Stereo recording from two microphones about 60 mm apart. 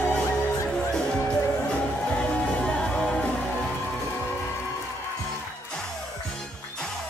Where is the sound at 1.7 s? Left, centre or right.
Centre.